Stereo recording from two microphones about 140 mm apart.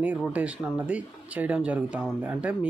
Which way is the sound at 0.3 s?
10° right (ahead or behind).